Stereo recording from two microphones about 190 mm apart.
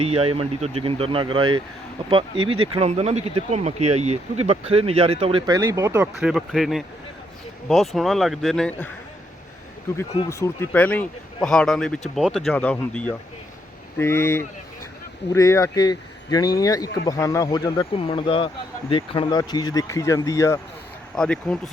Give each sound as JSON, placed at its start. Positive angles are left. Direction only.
{"t": 0.0, "sound": "speech", "side_deg": -30}
{"t": 5.5, "sound": "speech", "side_deg": -15}
{"t": 6.1, "sound": "speech", "side_deg": 0}
{"t": 10.2, "sound": "speech", "side_deg": 15}
{"t": 21.2, "sound": "speech", "side_deg": 5}